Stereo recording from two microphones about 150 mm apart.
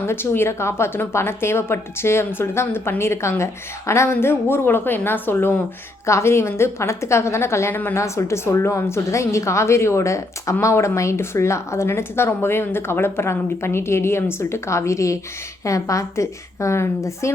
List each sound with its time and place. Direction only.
0.1 s a woman's voice: 15° left (ahead or behind)